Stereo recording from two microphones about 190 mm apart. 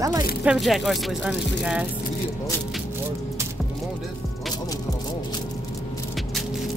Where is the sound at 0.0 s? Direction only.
20° right (ahead or behind).